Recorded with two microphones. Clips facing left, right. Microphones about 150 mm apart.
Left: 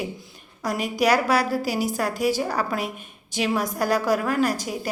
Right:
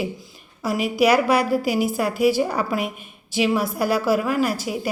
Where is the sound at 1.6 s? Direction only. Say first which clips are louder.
Right 3 dB; 40° left (ahead or behind).